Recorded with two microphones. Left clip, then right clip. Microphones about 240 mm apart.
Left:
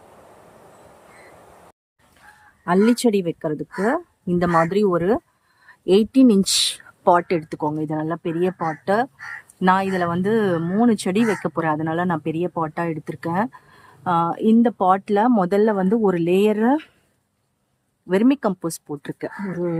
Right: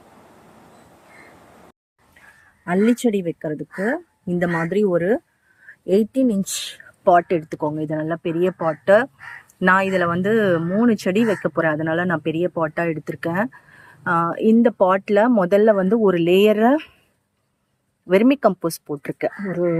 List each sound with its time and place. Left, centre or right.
2.6 s speech: centre
7.0 s speech: centre
8.5 s speech: centre
9.6 s speech: centre
18.1 s speech: centre